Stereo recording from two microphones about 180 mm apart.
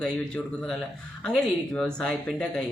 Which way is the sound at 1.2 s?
5° left (ahead or behind).